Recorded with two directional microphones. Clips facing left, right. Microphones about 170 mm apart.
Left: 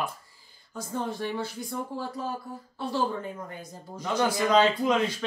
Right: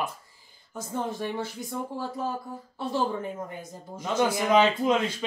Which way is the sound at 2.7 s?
20° right (ahead or behind).